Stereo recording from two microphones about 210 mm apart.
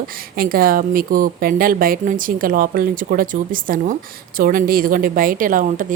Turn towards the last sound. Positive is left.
turn(degrees=-40)  # may be behind; listen again after turning